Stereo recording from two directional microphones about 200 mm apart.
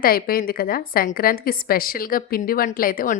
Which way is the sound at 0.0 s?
45° left (ahead or behind).